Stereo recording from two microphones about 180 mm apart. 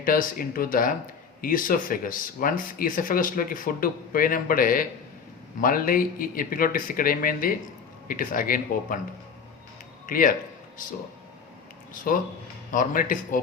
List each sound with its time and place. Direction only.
0.0 s speech: 50° left (ahead or behind)
10.1 s speech: 50° left (ahead or behind)
12.7 s speech: 50° left (ahead or behind)